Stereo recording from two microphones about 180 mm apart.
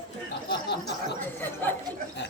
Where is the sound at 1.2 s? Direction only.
10° left (ahead or behind).